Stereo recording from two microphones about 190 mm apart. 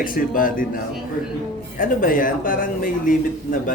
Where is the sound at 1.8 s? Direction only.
45° left (ahead or behind).